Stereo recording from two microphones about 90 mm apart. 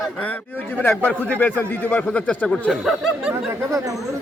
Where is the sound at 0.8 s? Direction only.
25° left (ahead or behind).